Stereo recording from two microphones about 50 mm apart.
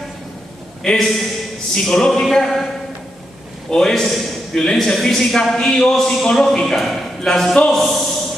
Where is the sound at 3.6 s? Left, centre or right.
Centre.